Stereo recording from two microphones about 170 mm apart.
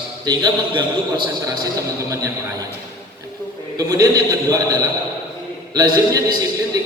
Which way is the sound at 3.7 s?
20° right (ahead or behind).